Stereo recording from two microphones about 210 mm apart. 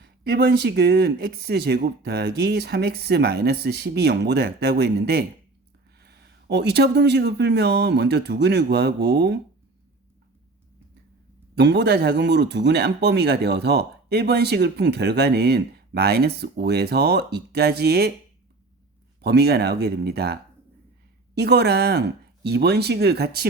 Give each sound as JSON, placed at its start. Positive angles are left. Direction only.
{"t": 0.0, "sound": "speech", "side_deg": -55}
{"t": 11.5, "sound": "speech", "side_deg": -55}
{"t": 19.2, "sound": "speech", "side_deg": -50}